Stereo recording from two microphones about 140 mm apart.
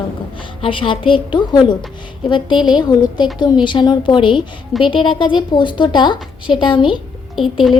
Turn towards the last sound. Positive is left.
turn(degrees=0)  # may be behind; listen again after turning